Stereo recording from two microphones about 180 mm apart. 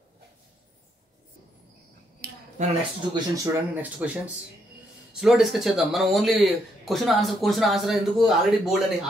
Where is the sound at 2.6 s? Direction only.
40° right (ahead or behind).